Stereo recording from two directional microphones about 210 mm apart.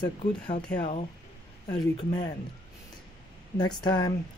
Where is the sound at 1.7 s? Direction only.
20° left (ahead or behind).